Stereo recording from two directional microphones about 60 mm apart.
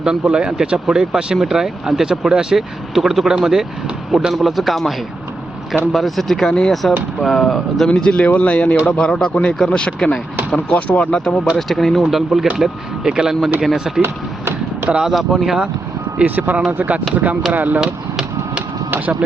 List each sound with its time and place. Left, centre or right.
0.0 s speech: centre
7.9 s speech: centre
11.5 s speech: centre
15.1 s speech: centre
16.1 s speech: right
17.7 s a sound: centre
18.9 s vehicle: right